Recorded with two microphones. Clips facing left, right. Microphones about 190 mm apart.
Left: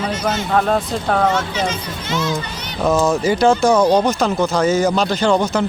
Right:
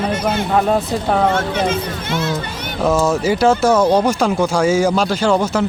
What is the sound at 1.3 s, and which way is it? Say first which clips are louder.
Speech: right 3 dB; 55° right (ahead or behind).